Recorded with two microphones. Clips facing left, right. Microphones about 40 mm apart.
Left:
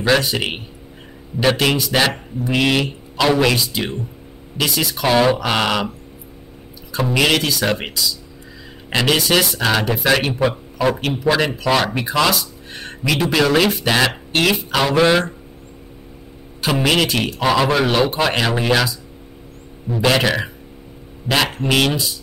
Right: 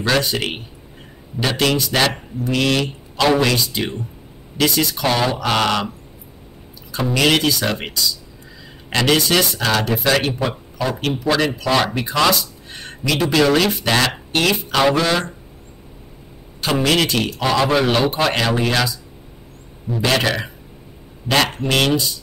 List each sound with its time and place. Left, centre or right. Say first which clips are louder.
0.0 s speech: left 2 dB; centre
1.4 s speech: left 2 dB; centre
3.2 s a man's voice: even; centre
6.9 s speech: even; centre
15.0 s speech: left 4 dB; left
16.9 s speech: even; centre